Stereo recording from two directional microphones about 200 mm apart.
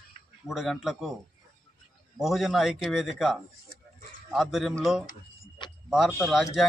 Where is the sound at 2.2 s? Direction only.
Centre (ahead or behind).